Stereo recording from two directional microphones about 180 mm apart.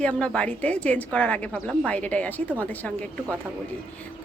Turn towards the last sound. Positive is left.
turn(degrees=10)  # may be behind; listen again after turning